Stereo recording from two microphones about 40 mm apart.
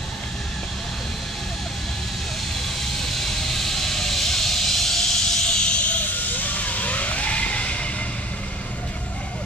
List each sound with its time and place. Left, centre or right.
2.8 s vehicle: centre; by 6.0 s left
6.1 s vehicle: left